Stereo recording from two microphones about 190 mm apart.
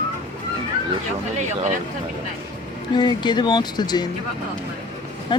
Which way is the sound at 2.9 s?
25° left (ahead or behind).